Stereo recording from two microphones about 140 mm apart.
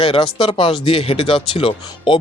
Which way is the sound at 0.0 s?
40° left (ahead or behind).